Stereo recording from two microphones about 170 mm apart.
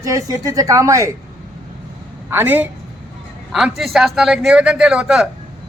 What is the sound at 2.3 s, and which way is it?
A man's voice, 10° right (ahead or behind).